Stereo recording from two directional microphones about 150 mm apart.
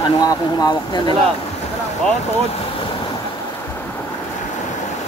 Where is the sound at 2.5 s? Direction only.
35° left (ahead or behind).